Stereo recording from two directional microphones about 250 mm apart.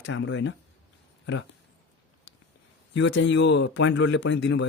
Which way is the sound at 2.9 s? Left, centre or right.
Left.